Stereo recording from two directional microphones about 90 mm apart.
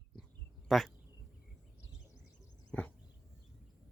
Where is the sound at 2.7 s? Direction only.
15° left (ahead or behind).